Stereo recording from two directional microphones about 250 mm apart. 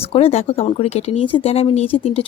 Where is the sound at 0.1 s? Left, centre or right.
Left.